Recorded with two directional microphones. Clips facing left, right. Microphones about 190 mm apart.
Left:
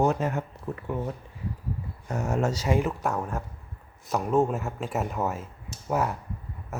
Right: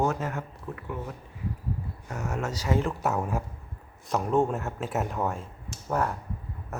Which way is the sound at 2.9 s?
5° right (ahead or behind).